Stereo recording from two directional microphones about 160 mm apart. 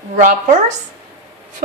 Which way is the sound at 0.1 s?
50° right (ahead or behind).